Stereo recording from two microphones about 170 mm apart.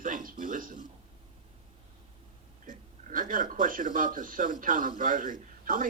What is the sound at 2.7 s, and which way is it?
Speech, 50° right (ahead or behind).